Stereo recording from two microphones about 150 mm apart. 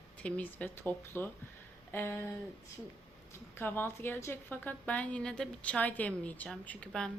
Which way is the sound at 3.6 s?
15° left (ahead or behind).